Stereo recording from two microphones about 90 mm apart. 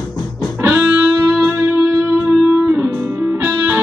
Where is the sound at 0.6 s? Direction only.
20° right (ahead or behind).